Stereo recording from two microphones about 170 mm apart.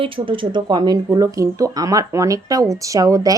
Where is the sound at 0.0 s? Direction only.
30° right (ahead or behind).